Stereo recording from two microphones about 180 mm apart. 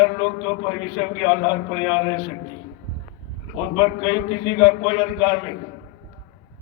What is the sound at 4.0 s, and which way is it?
A man's voice, 30° left (ahead or behind).